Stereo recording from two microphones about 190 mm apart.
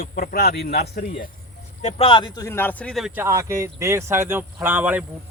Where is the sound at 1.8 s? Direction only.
35° left (ahead or behind); by 3.2 s centre (ahead or behind).